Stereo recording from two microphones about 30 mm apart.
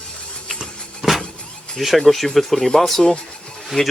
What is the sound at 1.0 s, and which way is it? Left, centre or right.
Vehicle, centre.